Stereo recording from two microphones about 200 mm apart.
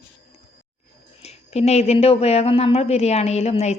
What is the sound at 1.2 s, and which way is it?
Speech, 30° left (ahead or behind).